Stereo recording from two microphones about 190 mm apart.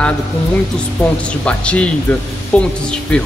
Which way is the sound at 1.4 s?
5° left (ahead or behind).